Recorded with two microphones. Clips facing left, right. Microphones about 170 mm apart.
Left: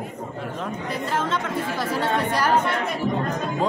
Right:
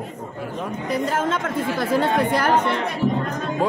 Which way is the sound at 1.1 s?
50° right (ahead or behind).